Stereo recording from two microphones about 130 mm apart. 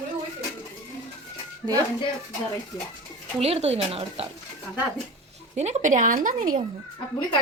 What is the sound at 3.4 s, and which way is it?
Speech, 50° right (ahead or behind).